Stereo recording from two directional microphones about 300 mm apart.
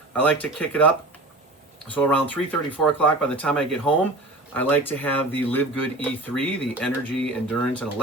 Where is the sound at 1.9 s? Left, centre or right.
Centre.